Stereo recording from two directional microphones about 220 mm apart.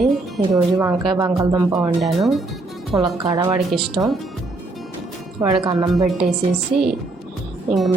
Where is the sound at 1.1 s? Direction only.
15° right (ahead or behind).